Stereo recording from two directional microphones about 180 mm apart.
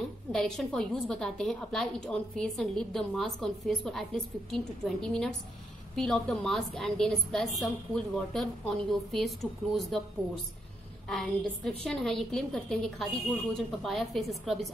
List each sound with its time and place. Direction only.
0.3 s a woman's voice: 5° left (ahead or behind)
11.6 s a woman's voice: 5° left (ahead or behind)